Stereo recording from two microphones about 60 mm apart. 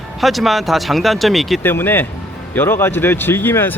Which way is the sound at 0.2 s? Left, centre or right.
Centre.